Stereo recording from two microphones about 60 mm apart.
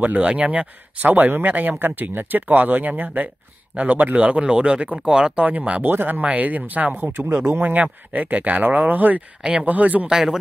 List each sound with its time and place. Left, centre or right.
0.0 s speech: right
5.9 s speech: right
7.2 s speech: right
7.6 s speech: right
9.4 s speech: centre
9.7 s speech: right
10.0 s speech: centre